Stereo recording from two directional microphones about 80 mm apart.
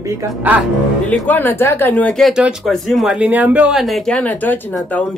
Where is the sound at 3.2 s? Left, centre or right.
Centre.